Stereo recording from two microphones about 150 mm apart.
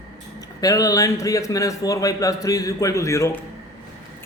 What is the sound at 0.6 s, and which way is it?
Speech, 25° left (ahead or behind).